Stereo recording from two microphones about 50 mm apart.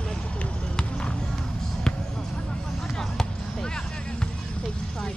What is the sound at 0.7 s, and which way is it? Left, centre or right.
Music, centre.